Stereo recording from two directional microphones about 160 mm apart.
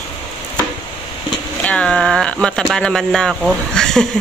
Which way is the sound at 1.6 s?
5° left (ahead or behind).